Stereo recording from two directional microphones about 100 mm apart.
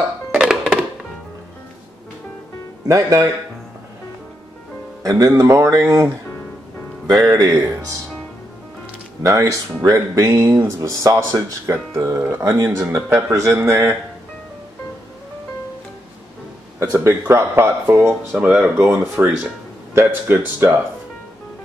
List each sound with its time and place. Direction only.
0.4 s music: 5° right (ahead or behind)
2.9 s speech: 35° right (ahead or behind)
5.2 s speech: 30° right (ahead or behind)
7.1 s speech: 30° right (ahead or behind)
9.2 s speech: 35° right (ahead or behind)
16.9 s speech: 30° right (ahead or behind); by 19.3 s 10° right (ahead or behind)
19.9 s speech: 25° right (ahead or behind)